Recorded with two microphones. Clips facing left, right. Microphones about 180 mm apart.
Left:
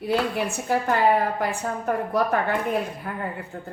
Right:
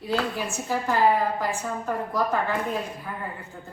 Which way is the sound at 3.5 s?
60° left (ahead or behind).